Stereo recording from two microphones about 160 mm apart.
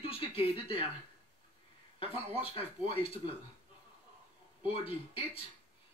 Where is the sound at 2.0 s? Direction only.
35° left (ahead or behind).